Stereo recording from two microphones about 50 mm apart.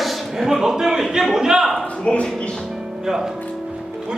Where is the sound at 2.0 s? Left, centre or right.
Left.